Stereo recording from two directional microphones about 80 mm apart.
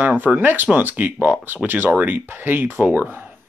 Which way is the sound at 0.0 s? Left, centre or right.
Right.